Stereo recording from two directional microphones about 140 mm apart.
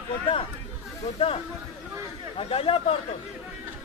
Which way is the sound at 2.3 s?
40° left (ahead or behind).